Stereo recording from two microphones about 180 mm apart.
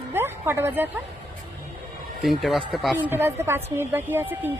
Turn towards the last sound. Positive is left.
turn(degrees=-10)  # may be behind; listen again after turning